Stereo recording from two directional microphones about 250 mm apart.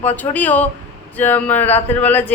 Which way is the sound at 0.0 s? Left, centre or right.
Centre.